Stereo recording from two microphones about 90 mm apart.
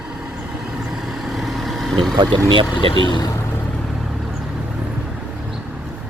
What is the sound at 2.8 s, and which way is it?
Speech, 65° left (ahead or behind).